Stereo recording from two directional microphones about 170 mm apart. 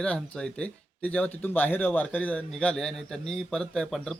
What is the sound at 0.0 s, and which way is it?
Speech, 5° left (ahead or behind).